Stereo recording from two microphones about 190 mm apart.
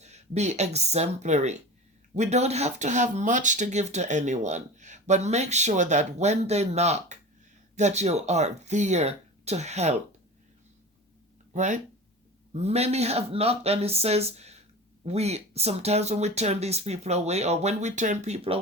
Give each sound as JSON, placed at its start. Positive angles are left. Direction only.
{"t": 0.0, "sound": "speech", "side_deg": -35}
{"t": 11.5, "sound": "speech", "side_deg": -40}